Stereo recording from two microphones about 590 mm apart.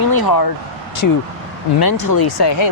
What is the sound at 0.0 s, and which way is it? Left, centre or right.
Speech, left.